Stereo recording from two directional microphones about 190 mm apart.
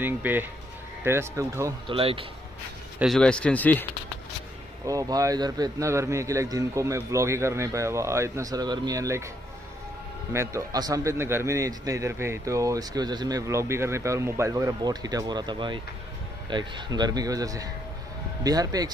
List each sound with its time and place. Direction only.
0.0 s a man's voice: 10° right (ahead or behind)
1.9 s speech: 30° right (ahead or behind)
3.0 s speech: centre (ahead or behind)
4.8 s a man's voice: 20° right (ahead or behind)
10.3 s a man's voice: 15° right (ahead or behind)